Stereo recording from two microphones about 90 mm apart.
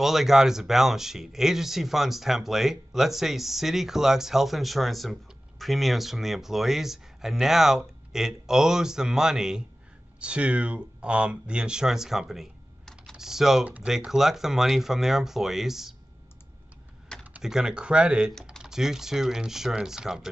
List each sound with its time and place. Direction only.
0.0 s speech: 5° right (ahead or behind)
13.7 s speech: 15° right (ahead or behind)
13.9 s speech: 5° right (ahead or behind)
17.4 s speech: 5° right (ahead or behind)
18.3 s speech: 5° left (ahead or behind)